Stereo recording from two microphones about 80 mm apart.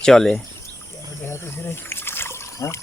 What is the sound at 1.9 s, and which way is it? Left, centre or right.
Liquid, left.